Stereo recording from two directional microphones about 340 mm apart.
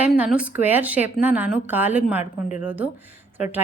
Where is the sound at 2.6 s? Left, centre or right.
Centre.